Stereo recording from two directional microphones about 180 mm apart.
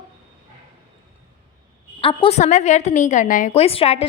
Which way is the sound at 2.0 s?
30° left (ahead or behind).